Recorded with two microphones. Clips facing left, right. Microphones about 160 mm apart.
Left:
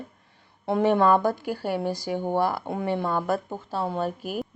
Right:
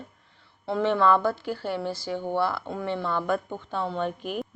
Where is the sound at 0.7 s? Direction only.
45° left (ahead or behind).